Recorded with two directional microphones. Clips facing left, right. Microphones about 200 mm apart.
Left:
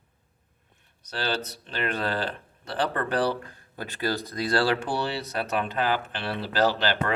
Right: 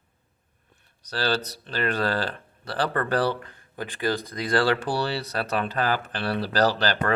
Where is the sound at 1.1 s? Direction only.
35° right (ahead or behind).